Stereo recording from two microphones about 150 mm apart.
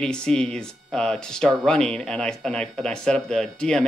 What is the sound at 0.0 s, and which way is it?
Speech, 5° left (ahead or behind).